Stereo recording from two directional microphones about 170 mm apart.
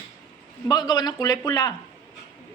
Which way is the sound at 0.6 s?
25° left (ahead or behind).